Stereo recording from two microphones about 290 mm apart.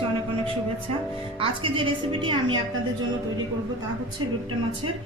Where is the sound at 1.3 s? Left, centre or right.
Centre.